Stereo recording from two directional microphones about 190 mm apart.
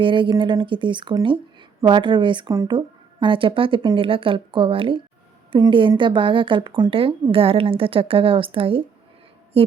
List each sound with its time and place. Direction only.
0.0 s speech: 25° right (ahead or behind)